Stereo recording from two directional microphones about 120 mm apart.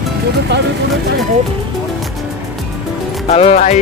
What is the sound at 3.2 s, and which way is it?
Speech, 60° left (ahead or behind).